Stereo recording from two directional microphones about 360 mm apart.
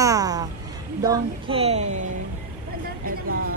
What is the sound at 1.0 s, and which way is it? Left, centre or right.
Speech, centre.